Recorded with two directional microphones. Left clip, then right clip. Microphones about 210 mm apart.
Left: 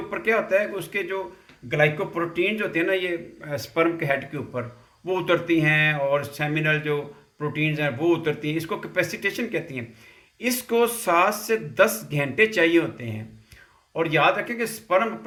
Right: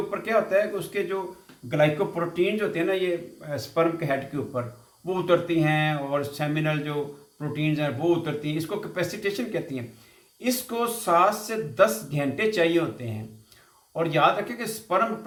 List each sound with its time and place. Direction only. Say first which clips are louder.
0.1 s speech: left 3 dB; 50° left (ahead or behind)